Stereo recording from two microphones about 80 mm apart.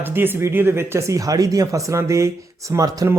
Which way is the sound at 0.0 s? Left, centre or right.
Right.